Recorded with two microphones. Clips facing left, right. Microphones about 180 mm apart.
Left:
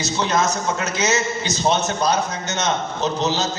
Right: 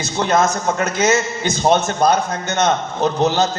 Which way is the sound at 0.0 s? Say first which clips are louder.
Right 4 dB; 55° right (ahead or behind).